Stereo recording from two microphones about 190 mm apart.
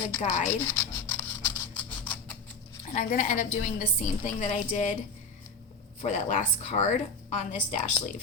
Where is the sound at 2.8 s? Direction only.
45° left (ahead or behind).